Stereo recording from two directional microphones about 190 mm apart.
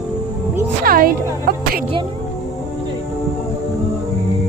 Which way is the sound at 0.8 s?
50° right (ahead or behind).